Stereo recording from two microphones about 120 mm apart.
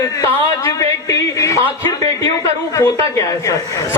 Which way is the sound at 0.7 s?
30° left (ahead or behind).